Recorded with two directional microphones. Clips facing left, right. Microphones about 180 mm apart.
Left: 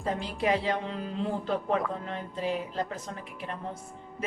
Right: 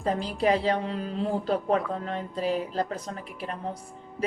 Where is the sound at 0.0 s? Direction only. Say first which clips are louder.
Right 4 dB; 35° right (ahead or behind).